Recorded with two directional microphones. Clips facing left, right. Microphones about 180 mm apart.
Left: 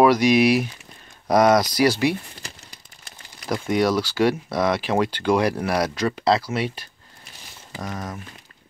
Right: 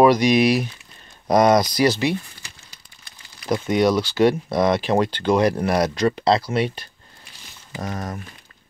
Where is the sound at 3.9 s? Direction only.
5° left (ahead or behind).